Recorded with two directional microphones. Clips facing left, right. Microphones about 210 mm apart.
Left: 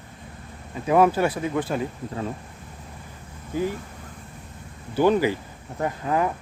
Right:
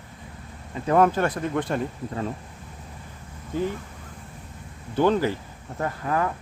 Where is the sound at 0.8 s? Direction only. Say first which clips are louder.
Left 1 dB; 10° left (ahead or behind).